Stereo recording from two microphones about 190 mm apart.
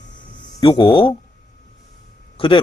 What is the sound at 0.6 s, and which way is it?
Speech, 25° left (ahead or behind).